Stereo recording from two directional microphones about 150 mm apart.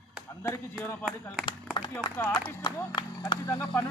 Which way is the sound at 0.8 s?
15° left (ahead or behind).